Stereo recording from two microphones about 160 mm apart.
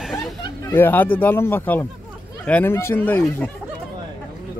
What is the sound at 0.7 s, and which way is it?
Speech, 15° left (ahead or behind).